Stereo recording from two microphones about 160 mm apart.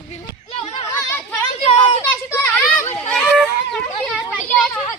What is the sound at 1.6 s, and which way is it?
Children playing, 35° left (ahead or behind).